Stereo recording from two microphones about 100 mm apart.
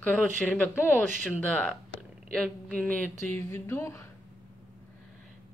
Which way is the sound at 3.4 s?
25° left (ahead or behind).